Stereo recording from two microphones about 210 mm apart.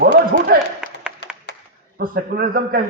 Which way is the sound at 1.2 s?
55° left (ahead or behind).